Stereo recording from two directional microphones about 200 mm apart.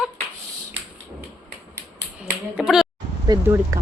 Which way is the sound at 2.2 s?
Centre (ahead or behind).